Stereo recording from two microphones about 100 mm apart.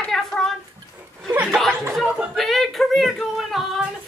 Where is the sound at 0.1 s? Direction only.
5° left (ahead or behind).